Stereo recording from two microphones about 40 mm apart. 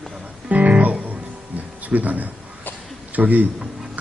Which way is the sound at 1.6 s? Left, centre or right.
Right.